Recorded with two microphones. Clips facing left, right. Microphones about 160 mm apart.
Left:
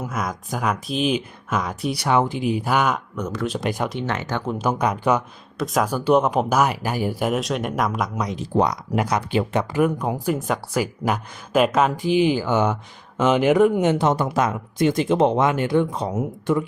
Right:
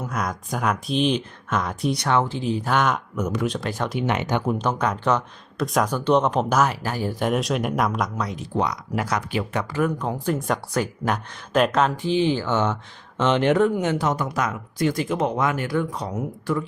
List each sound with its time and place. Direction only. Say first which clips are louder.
0.0 s speech: even; 5° left (ahead or behind)
3.2 s speech: right 2 dB; 10° right (ahead or behind)
3.6 s speech: left 3 dB; 15° left (ahead or behind)
4.0 s speech: right 2 dB; 15° right (ahead or behind)
4.5 s speech: left 2 dB; 10° left (ahead or behind)
8.1 s speech: left 2 dB; 20° left (ahead or behind)
8.4 s speech: left 6 dB; 35° left (ahead or behind)
9.0 s speech: left 4 dB; 20° left (ahead or behind)
13.7 s speech: left 4 dB; 25° left (ahead or behind)